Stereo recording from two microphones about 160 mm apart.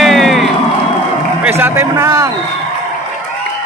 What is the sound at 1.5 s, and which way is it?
Speech, 15° right (ahead or behind).